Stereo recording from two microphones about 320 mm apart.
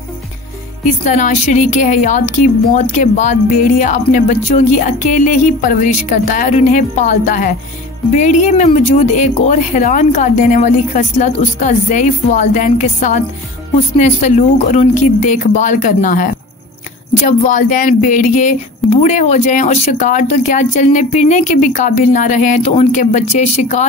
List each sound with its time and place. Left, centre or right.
1.0 s speech: left
17.3 s speech: left